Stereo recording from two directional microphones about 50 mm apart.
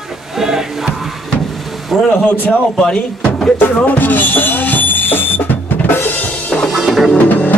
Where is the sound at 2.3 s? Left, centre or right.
Left.